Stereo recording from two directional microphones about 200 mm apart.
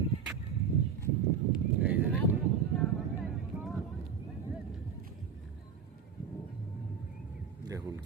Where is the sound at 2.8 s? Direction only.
Centre (ahead or behind).